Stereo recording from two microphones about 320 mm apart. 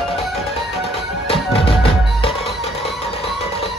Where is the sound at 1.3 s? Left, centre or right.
Centre.